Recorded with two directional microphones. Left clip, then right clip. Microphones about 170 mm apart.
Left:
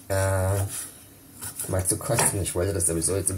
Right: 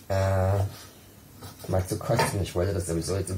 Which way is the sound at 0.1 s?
20° left (ahead or behind).